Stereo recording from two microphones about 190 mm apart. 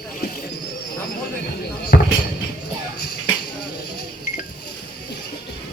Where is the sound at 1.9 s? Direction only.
55° left (ahead or behind).